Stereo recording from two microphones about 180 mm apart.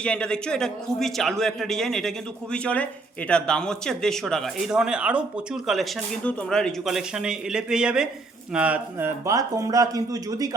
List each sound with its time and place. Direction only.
0.0 s a man's voice: 5° left (ahead or behind); by 10.5 s 20° right (ahead or behind)